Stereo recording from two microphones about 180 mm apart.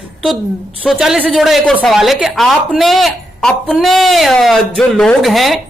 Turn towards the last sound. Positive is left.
turn(degrees=0)  # may be behind; listen again after turning